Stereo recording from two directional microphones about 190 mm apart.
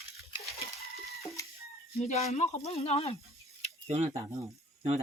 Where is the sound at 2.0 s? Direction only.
35° left (ahead or behind).